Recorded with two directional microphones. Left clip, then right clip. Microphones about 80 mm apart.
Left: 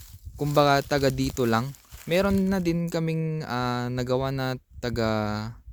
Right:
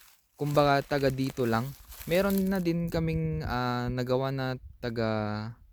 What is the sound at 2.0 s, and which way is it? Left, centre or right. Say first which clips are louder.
Speech: left 3 dB; left.